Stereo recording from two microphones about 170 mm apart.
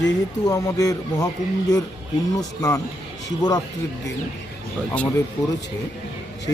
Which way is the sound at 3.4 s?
20° left (ahead or behind).